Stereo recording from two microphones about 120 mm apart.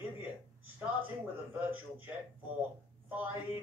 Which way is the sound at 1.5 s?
15° right (ahead or behind).